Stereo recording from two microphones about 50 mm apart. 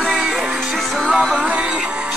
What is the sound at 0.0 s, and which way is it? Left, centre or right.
Music, centre.